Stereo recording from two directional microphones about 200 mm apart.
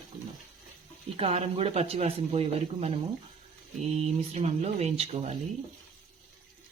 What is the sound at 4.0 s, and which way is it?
Speech, 35° right (ahead or behind).